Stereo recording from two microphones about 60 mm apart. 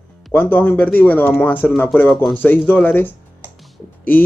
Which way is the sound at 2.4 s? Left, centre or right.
Left.